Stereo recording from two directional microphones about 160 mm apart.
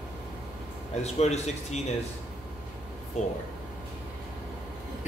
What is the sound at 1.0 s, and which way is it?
Speech, 45° left (ahead or behind).